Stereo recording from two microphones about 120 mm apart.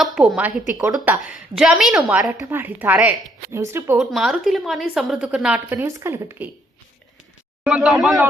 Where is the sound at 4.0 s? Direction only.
Centre (ahead or behind); by 6.1 s 20° right (ahead or behind).